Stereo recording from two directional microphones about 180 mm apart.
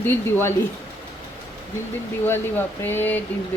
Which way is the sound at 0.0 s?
10° left (ahead or behind).